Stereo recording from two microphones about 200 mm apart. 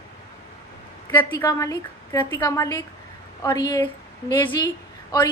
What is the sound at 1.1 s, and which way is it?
A woman's voice, 20° left (ahead or behind).